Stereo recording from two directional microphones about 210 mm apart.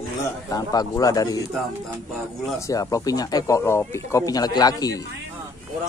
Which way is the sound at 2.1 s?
Centre (ahead or behind).